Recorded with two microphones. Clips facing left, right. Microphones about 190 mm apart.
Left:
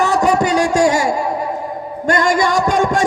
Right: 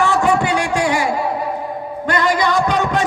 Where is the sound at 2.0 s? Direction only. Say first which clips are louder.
Left 2 dB; 45° left (ahead or behind).